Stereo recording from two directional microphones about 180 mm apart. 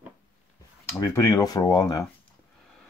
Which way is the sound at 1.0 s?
15° left (ahead or behind).